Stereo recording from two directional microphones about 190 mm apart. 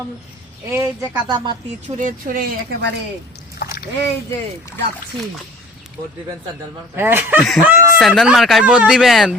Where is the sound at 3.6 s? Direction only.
55° left (ahead or behind).